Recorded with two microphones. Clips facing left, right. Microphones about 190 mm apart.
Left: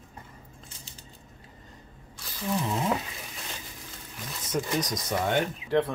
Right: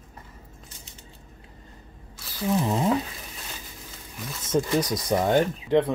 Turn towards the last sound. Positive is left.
turn(degrees=-20)  # may be behind; listen again after turning